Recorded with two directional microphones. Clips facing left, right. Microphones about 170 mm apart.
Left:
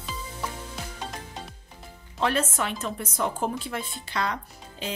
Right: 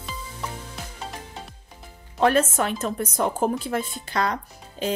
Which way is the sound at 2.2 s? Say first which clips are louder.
Right 6 dB; 45° right (ahead or behind).